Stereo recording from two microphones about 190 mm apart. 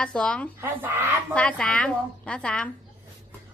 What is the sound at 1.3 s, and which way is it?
Speech, 5° left (ahead or behind).